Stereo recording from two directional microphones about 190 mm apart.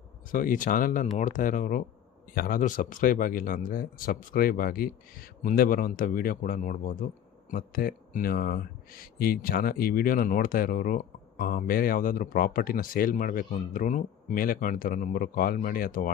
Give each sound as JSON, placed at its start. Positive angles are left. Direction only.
{"t": 0.3, "sound": "speech", "side_deg": 45}